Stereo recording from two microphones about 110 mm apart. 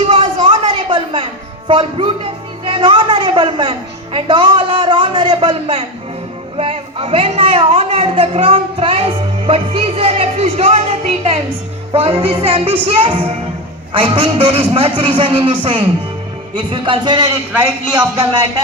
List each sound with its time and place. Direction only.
0.0 s music: 65° right (ahead or behind); by 2.1 s 50° right (ahead or behind)
2.6 s a woman's voice: 50° right (ahead or behind); by 11.3 s 75° right (ahead or behind)
11.9 s a woman's voice: 60° right (ahead or behind); by 18.3 s 40° right (ahead or behind)